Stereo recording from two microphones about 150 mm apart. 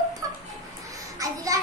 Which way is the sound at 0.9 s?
25° right (ahead or behind).